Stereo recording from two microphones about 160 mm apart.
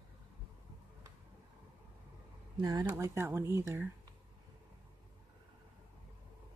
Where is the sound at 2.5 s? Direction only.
25° right (ahead or behind).